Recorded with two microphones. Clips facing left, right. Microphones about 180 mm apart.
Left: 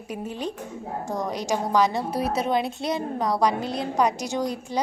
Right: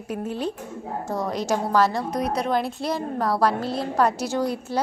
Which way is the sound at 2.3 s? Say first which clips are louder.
Even; centre (ahead or behind).